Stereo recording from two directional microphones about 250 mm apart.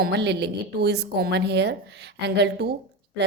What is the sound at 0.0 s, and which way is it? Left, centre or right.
A woman's voice, right.